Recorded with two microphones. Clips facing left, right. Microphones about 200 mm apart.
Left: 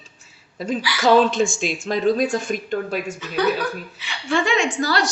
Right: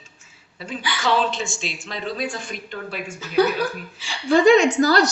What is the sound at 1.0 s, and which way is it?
Speech, 45° left (ahead or behind).